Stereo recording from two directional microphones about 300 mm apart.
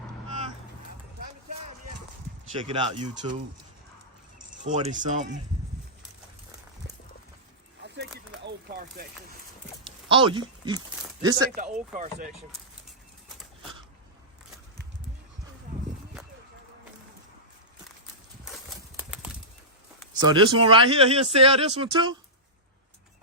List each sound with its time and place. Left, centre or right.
2.6 s speech: centre
4.6 s speech: right
7.8 s a sound: right
10.1 s speech: centre
11.5 s speech: right
18.9 s clip-clop: centre
20.2 s speech: centre